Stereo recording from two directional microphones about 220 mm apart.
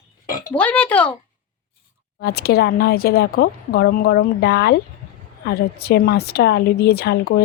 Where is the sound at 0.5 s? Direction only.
5° left (ahead or behind).